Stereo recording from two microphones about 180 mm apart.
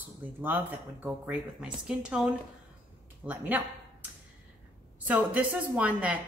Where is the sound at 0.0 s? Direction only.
10° right (ahead or behind).